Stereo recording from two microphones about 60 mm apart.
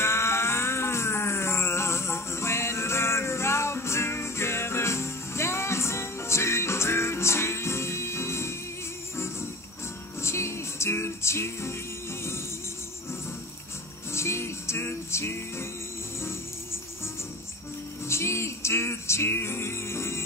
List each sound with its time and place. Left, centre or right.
0.0 s music: left
14.1 s music: left
18.0 s music: left